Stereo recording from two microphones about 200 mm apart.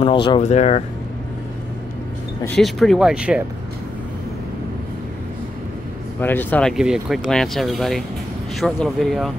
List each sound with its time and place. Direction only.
0.0 s speech: 25° left (ahead or behind)
2.4 s speech: centre (ahead or behind)
6.2 s speech: 10° left (ahead or behind)
6.8 s speech: centre (ahead or behind)